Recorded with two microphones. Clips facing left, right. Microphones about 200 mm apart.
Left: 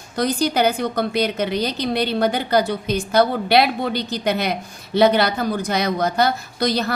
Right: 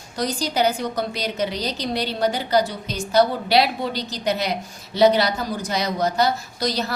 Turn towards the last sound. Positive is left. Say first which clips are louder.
# left 4 dB
turn(degrees=55)  # may be behind; listen again after turning